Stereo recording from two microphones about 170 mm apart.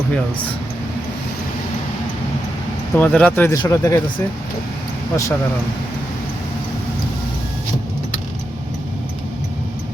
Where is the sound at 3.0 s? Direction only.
5° left (ahead or behind).